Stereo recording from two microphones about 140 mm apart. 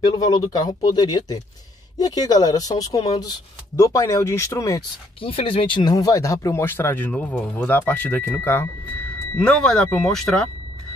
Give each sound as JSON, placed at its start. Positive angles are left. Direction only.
{"t": 0.2, "sound": "speech", "side_deg": 25}
{"t": 5.2, "sound": "speech", "side_deg": 40}